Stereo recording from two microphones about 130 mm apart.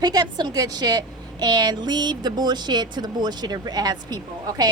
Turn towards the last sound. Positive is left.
turn(degrees=-30)  # may be behind; listen again after turning